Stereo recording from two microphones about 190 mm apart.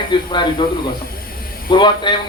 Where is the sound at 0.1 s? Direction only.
25° left (ahead or behind).